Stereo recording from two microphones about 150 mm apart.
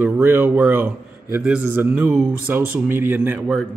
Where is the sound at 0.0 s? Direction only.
15° right (ahead or behind).